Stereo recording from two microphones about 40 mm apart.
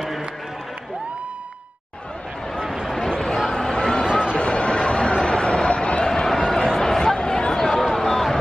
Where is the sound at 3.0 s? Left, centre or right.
Left.